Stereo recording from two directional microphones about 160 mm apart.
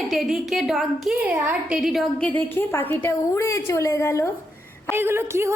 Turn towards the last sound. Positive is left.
turn(degrees=-15)  # may be behind; listen again after turning